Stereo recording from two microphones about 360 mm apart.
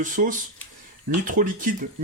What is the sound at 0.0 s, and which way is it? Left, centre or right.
Speech, right.